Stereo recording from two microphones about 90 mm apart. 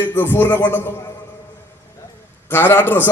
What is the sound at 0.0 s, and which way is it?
Speech, 20° left (ahead or behind).